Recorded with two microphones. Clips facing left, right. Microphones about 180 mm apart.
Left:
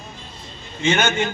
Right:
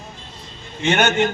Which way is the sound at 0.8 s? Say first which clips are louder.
Right 2 dB; 65° right (ahead or behind).